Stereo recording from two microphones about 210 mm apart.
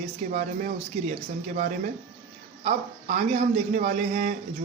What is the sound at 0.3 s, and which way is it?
Speech, 40° right (ahead or behind).